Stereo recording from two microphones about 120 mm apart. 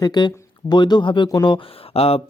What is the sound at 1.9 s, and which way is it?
Speech, 55° left (ahead or behind).